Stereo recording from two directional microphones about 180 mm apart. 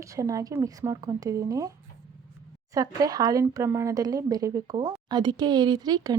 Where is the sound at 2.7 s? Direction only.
20° right (ahead or behind).